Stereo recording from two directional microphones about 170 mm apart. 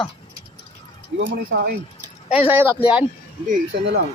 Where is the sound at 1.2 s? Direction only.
90° right.